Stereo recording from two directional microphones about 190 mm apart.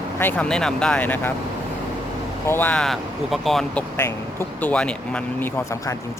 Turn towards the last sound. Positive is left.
turn(degrees=5)  # may be behind; listen again after turning